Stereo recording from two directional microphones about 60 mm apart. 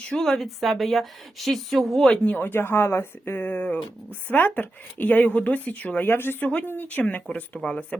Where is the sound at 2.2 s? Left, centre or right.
Left.